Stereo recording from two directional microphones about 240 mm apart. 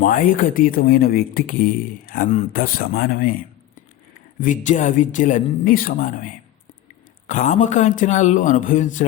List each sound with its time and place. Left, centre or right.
0.0 s speech: left
4.4 s speech: left
7.3 s speech: left